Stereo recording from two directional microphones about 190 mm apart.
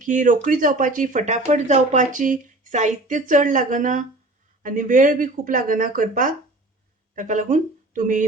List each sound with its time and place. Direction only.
0.0 s speech: 45° right (ahead or behind)